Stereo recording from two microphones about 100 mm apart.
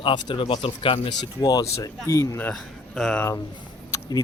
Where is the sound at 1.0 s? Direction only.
45° left (ahead or behind).